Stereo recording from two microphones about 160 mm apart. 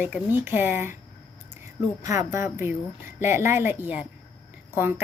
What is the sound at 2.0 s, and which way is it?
Speech, 20° right (ahead or behind).